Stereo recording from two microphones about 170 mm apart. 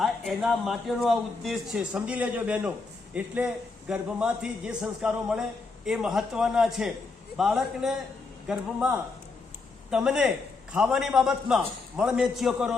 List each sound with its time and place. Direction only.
0.0 s a man's voice: centre (ahead or behind)
9.9 s a man's voice: 5° right (ahead or behind)